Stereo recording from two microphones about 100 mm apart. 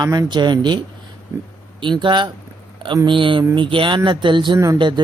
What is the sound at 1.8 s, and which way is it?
Speech, 50° right (ahead or behind).